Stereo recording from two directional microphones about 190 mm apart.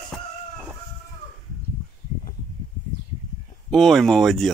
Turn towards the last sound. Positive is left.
turn(degrees=0)  # may be behind; listen again after turning